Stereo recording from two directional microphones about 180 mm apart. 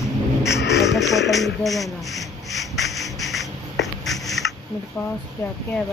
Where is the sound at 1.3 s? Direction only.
Centre (ahead or behind).